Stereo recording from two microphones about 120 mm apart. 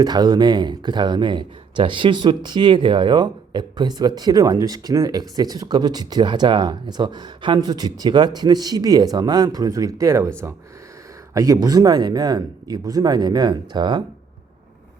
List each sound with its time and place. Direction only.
0.0 s speech: 35° right (ahead or behind)
11.3 s speech: 30° right (ahead or behind)